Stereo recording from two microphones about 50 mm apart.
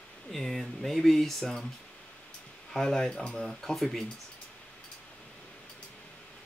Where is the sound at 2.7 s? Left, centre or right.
Centre.